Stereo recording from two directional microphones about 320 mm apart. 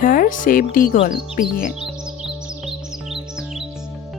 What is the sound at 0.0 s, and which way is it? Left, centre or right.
Speech, left.